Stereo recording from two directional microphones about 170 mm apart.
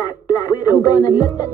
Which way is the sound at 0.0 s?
20° left (ahead or behind).